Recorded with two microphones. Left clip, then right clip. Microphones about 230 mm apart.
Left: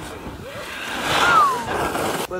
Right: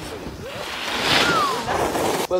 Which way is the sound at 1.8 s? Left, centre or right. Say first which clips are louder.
Right 1 dB; right.